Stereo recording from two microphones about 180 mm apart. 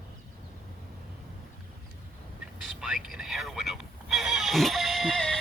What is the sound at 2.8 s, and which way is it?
Neigh, 5° right (ahead or behind).